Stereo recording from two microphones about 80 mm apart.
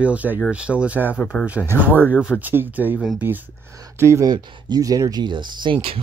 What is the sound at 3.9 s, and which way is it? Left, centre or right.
Speech, right.